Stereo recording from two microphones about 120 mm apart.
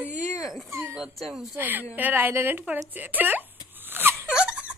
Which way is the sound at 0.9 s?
Centre (ahead or behind).